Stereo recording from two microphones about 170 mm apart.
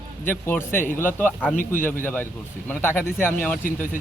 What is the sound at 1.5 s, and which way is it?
Speech, 50° left (ahead or behind).